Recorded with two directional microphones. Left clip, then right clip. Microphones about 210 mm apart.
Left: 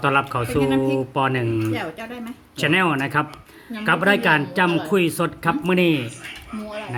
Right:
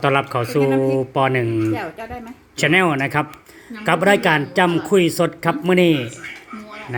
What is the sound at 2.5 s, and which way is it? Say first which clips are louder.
Speech: right 3 dB; 15° right (ahead or behind).